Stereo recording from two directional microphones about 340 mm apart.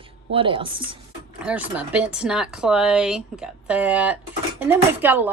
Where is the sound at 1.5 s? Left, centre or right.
Centre.